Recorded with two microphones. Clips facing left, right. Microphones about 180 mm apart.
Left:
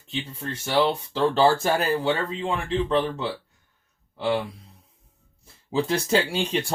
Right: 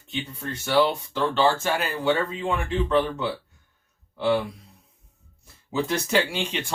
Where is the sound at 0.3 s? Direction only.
25° left (ahead or behind).